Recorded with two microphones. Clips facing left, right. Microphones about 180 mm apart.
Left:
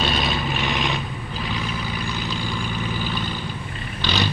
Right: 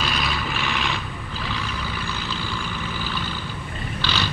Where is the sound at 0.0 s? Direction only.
25° left (ahead or behind).